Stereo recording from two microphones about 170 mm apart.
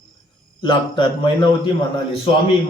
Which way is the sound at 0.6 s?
30° left (ahead or behind).